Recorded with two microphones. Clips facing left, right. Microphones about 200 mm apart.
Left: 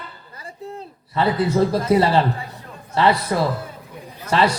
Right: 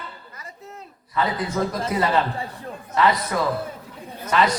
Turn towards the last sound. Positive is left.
turn(degrees=30)  # may be behind; listen again after turning